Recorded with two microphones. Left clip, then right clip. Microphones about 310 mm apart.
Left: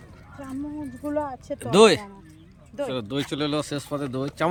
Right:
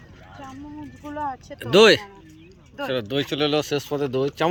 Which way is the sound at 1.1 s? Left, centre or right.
Left.